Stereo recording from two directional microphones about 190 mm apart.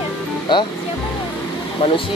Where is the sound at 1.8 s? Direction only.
30° left (ahead or behind).